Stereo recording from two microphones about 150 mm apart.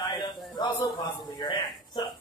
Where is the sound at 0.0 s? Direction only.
30° left (ahead or behind).